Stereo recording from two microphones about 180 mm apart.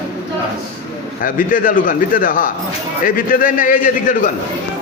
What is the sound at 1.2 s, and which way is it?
A man's voice, 50° left (ahead or behind).